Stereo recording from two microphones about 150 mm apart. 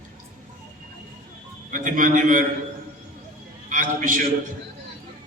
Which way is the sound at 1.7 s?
60° right (ahead or behind).